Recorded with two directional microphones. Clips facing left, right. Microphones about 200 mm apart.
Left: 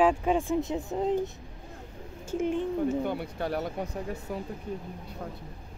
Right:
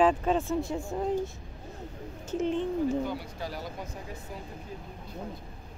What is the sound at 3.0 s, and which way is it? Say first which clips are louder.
Speech: left 3 dB; 60° left (ahead or behind).